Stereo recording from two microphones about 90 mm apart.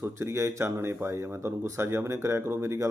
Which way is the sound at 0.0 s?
30° right (ahead or behind).